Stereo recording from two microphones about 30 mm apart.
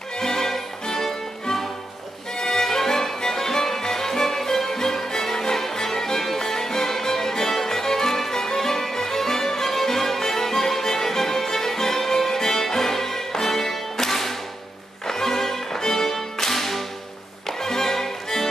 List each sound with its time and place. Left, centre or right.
0.2 s music: centre